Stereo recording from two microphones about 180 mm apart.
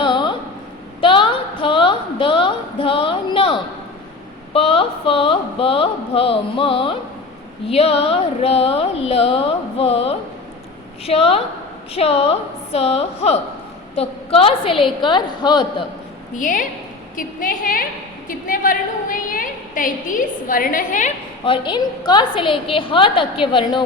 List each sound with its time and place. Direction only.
0.0 s a sound: 25° left (ahead or behind)
4.5 s a woman's voice: 30° left (ahead or behind)
16.4 s a woman's voice: 45° left (ahead or behind)
21.4 s a woman's voice: 30° left (ahead or behind)